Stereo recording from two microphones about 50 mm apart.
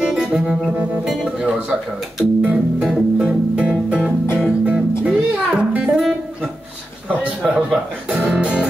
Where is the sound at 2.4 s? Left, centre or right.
Right.